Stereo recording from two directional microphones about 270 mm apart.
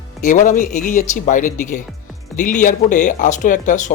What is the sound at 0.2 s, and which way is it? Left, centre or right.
Speech, left.